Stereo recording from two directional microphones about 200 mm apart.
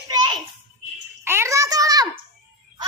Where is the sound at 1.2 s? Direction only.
10° right (ahead or behind).